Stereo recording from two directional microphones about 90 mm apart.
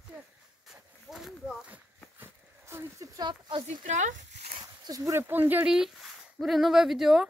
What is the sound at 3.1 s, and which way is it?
Speech, 55° right (ahead or behind).